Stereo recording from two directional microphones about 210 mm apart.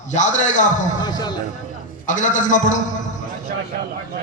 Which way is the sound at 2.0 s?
35° left (ahead or behind).